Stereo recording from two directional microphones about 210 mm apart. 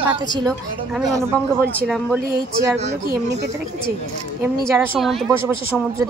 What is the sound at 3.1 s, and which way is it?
Speech, 55° right (ahead or behind).